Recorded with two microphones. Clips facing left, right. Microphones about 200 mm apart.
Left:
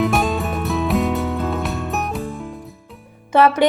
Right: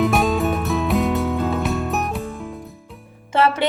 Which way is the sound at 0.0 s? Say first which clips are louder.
Right 1 dB; centre (ahead or behind).